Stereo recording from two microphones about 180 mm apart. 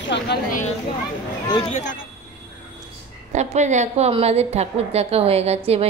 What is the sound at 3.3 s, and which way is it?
A woman's voice, 40° right (ahead or behind).